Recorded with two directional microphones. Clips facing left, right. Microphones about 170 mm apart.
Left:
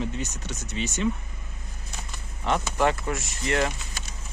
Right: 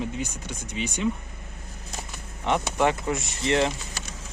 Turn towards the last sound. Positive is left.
turn(degrees=-25)  # may be behind; listen again after turning